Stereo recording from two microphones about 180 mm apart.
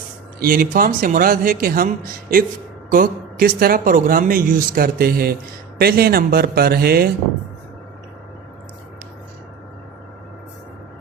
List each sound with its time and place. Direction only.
0.3 s speech: 50° right (ahead or behind)
2.9 s a man's voice: 55° right (ahead or behind)